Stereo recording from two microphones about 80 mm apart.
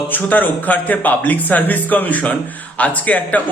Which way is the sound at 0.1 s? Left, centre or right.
Left.